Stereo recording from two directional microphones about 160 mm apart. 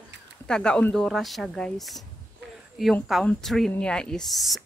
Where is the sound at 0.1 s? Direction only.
90° right.